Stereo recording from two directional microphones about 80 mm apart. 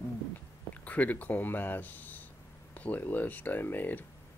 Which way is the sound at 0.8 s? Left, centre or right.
Centre.